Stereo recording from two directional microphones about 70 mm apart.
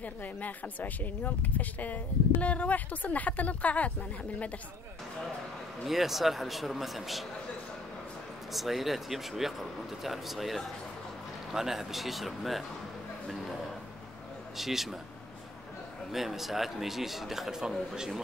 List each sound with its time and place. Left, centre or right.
0.0 s speech: left
5.9 s a man's voice: centre
8.5 s a man's voice: centre
14.6 s a man's voice: centre
16.1 s a man's voice: centre